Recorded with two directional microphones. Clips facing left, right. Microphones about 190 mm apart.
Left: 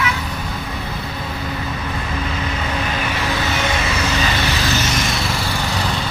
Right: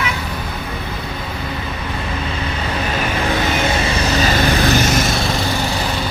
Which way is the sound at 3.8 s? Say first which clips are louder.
Right 3 dB; 40° right (ahead or behind).